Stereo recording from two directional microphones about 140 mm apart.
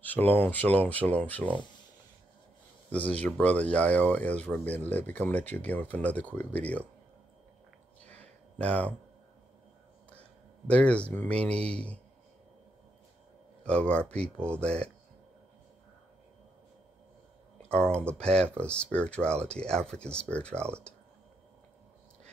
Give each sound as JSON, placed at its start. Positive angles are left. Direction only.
{"t": 0.0, "sound": "speech", "side_deg": 10}
{"t": 2.9, "sound": "speech", "side_deg": 10}
{"t": 8.1, "sound": "a sound", "side_deg": 10}
{"t": 10.7, "sound": "speech", "side_deg": 10}
{"t": 13.7, "sound": "speech", "side_deg": 10}
{"t": 14.3, "sound": "speech", "side_deg": -15}
{"t": 17.6, "sound": "speech", "side_deg": 5}